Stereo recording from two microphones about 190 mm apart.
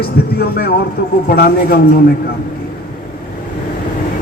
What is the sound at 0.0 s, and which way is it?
A man's voice, 55° left (ahead or behind).